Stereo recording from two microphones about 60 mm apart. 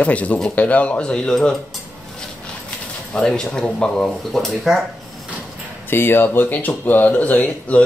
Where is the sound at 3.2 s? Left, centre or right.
Centre.